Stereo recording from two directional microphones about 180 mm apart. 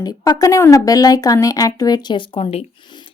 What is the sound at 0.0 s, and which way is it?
A woman's voice, 20° left (ahead or behind).